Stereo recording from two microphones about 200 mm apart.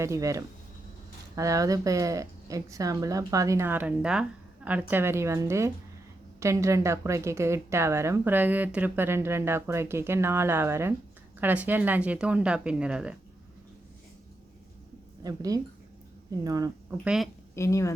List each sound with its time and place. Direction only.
0.0 s a woman's voice: 15° right (ahead or behind)
15.2 s a woman's voice: 20° right (ahead or behind)
17.0 s speech: 5° right (ahead or behind)
17.5 s speech: 15° left (ahead or behind)